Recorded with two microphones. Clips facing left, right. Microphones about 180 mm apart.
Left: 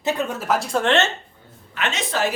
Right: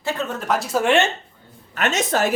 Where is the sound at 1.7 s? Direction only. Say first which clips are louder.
Right 4 dB; 45° right (ahead or behind).